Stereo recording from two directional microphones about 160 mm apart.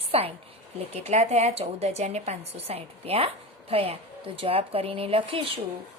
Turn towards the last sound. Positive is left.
turn(degrees=-35)  # may be behind; listen again after turning